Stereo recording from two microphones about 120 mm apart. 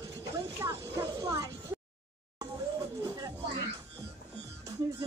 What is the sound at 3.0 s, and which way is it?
Music, 30° right (ahead or behind).